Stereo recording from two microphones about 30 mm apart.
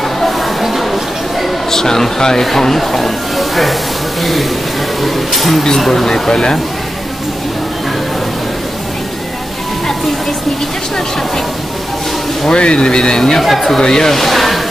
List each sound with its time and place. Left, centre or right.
0.6 s a sound: centre
1.7 s speech: centre
6.0 s speech: centre
12.4 s speech: left
13.4 s speech: centre
13.7 s speech: left
14.1 s speech: centre